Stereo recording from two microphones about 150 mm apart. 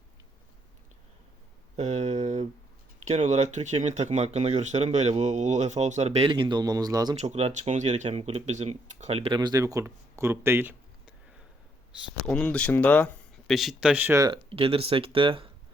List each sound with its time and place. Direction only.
1.7 s a sound: 45° right (ahead or behind)
3.1 s speech: 50° right (ahead or behind); by 7.2 s 25° right (ahead or behind)
7.2 s speech: 45° right (ahead or behind)
9.3 s speech: 25° right (ahead or behind)
12.2 s speech: 5° left (ahead or behind)
13.5 s speech: centre (ahead or behind)
14.5 s speech: 40° right (ahead or behind)